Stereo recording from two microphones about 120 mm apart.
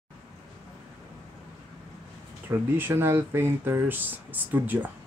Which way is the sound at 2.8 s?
20° right (ahead or behind).